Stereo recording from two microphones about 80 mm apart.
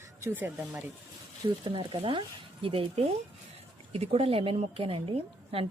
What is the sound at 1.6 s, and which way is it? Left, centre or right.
Speech, right.